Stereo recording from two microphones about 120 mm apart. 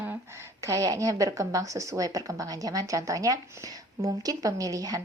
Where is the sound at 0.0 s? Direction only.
20° right (ahead or behind).